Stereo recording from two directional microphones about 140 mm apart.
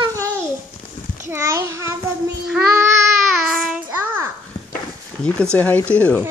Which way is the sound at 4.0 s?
15° right (ahead or behind).